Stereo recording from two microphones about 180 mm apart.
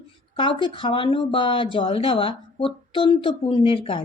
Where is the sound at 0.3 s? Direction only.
30° left (ahead or behind).